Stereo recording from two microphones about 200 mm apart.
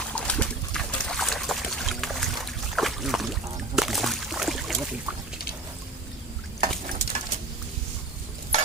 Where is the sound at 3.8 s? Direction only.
Centre (ahead or behind).